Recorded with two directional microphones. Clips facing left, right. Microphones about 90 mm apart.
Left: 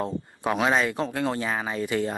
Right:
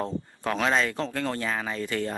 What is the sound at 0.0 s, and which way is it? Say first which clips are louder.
Speech: left 2 dB; 15° left (ahead or behind).